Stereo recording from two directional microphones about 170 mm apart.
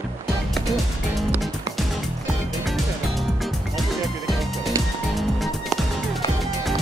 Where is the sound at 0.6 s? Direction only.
Centre (ahead or behind).